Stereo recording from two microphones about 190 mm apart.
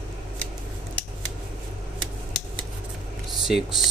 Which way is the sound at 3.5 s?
Centre (ahead or behind).